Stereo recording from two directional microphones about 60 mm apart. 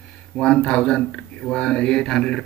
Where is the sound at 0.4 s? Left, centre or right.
Centre.